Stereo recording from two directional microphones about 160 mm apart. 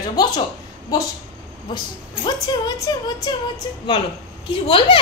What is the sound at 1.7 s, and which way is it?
Speech, 25° left (ahead or behind).